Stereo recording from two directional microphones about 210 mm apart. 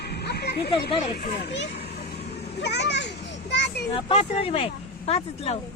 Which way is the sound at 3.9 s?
25° left (ahead or behind).